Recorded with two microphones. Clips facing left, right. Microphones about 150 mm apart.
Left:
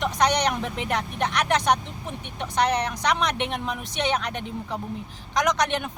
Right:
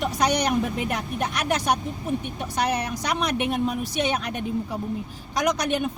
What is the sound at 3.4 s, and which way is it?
A woman's voice, 5° right (ahead or behind).